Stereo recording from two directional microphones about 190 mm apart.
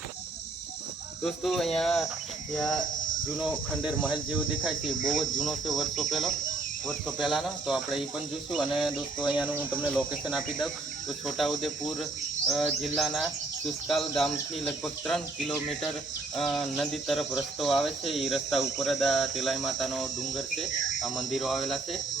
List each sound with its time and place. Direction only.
1.2 s speech: centre (ahead or behind)
5.4 s speech: centre (ahead or behind)
9.9 s speech: 5° left (ahead or behind)